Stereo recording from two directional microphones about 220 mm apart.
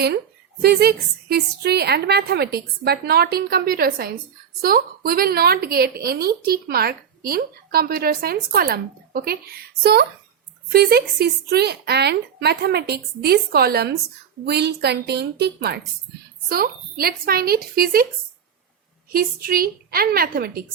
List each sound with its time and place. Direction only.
0.6 s a woman's voice: 45° right (ahead or behind)
19.1 s a woman's voice: 40° right (ahead or behind)